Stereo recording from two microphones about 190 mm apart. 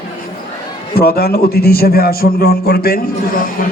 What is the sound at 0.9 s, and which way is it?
A man's voice, 55° left (ahead or behind).